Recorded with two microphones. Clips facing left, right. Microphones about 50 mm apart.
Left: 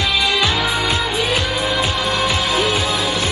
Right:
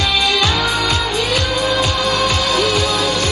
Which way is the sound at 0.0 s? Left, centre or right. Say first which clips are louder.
Right 1 dB; centre.